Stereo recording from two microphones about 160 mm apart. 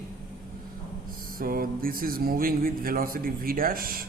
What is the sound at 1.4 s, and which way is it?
Speech, 65° right (ahead or behind).